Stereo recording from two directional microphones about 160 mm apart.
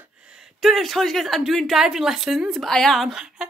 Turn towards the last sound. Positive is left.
turn(degrees=-5)  # may be behind; listen again after turning